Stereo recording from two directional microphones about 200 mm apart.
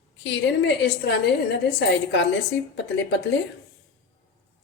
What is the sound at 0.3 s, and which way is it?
A woman's voice, 60° left (ahead or behind).